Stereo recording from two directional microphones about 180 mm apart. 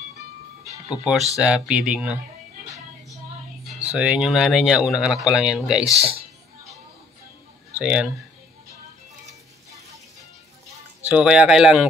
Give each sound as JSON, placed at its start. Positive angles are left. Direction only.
{"t": 0.8, "sound": "speech", "side_deg": 0}
{"t": 3.9, "sound": "speech", "side_deg": -5}
{"t": 5.9, "sound": "speech", "side_deg": -35}
{"t": 7.8, "sound": "speech", "side_deg": -5}
{"t": 11.1, "sound": "speech", "side_deg": -5}